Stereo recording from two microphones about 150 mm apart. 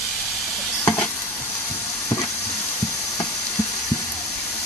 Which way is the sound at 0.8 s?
10° left (ahead or behind).